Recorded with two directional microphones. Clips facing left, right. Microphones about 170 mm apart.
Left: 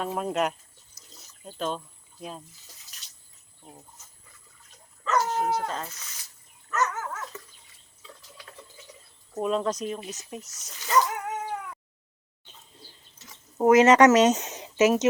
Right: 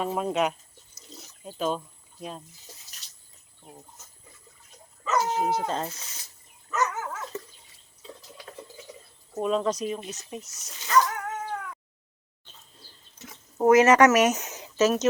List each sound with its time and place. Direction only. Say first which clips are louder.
0.0 s speech: right 1 dB; centre (ahead or behind)
5.1 s speech: even; 10° right (ahead or behind)
5.5 s speech: right 1 dB; 25° right (ahead or behind)
6.7 s dog: even; 10° right (ahead or behind)
9.3 s speech: right 1 dB; centre (ahead or behind)
10.8 s dog: right 1 dB; 20° left (ahead or behind)
13.6 s speech: left 1 dB; 15° left (ahead or behind)